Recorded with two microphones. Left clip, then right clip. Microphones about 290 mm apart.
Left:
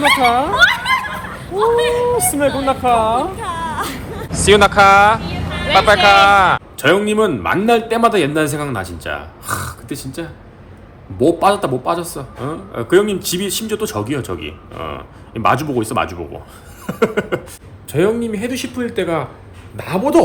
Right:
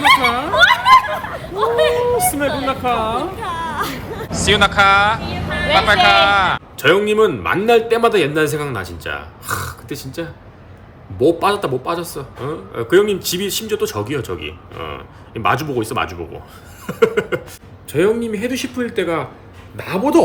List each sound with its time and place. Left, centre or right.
0.3 s a man's voice: centre
0.6 s snicker: right
1.0 s speech: right
2.6 s a man's voice: centre
3.3 s a sound: centre
5.8 s a man's voice: centre